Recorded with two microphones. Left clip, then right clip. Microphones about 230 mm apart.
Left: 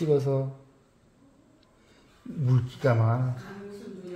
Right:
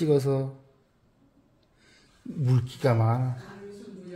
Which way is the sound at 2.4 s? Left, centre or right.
Right.